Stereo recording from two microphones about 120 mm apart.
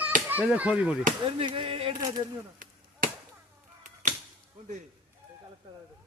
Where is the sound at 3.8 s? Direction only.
90° right.